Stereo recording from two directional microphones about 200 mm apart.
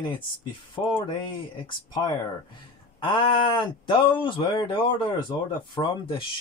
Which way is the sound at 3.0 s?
25° left (ahead or behind).